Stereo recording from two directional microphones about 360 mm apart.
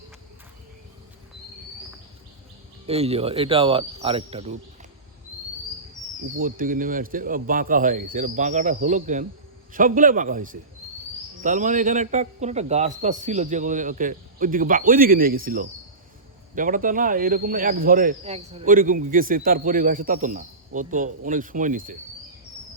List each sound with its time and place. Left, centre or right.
2.8 s speech: centre
6.4 s speech: right